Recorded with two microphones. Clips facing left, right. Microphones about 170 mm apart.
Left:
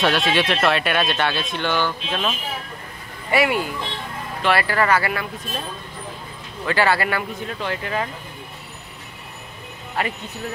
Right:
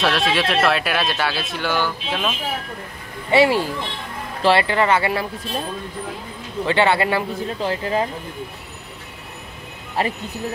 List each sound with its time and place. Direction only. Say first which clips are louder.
0.0 s speech: even; centre (ahead or behind)
3.3 s speech: right 4 dB; 30° right (ahead or behind)
6.6 s speech: right 2 dB; 25° right (ahead or behind)
10.0 s speech: right 3 dB; 35° right (ahead or behind)